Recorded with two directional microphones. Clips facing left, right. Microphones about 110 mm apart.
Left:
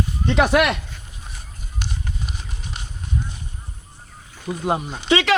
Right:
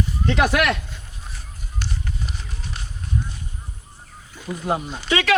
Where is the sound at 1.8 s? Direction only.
15° left (ahead or behind).